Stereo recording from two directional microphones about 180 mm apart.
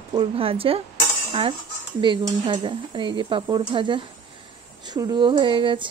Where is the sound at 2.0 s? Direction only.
25° right (ahead or behind).